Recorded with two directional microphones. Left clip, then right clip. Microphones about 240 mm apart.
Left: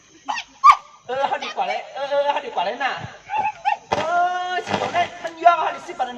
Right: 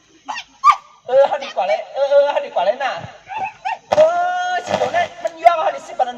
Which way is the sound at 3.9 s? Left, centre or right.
Right.